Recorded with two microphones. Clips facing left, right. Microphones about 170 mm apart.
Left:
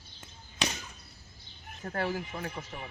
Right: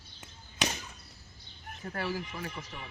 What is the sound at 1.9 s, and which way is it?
Speech, 50° left (ahead or behind).